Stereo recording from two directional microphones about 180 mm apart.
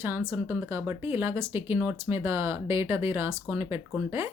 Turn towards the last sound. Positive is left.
turn(degrees=-15)  # may be behind; listen again after turning